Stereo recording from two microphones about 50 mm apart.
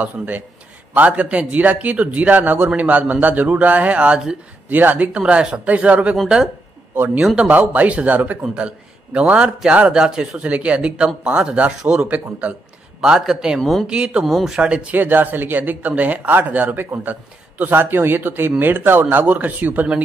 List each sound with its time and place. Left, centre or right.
0.0 s speech: right
4.6 s speech: right
5.1 s speech: centre
6.2 s speech: centre
7.4 s speech: right
8.4 s a man's voice: right
10.4 s speech: right
13.6 s speech: centre
13.8 s speech: right
14.2 s speech: centre
14.6 s speech: centre
14.9 s speech: right
19.0 s speech: right